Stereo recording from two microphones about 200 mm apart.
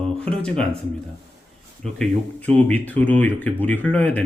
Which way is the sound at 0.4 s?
5° left (ahead or behind).